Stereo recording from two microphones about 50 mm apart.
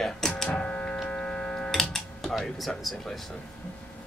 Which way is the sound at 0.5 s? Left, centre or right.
Left.